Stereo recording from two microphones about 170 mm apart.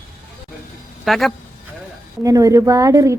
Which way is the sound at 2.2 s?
20° right (ahead or behind).